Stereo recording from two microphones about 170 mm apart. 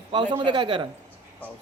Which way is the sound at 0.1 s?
30° right (ahead or behind).